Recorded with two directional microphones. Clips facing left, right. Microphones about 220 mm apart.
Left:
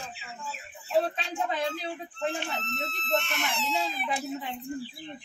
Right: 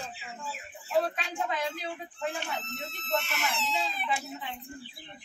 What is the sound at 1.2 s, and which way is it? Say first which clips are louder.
Speech: left 2 dB; 30° left (ahead or behind).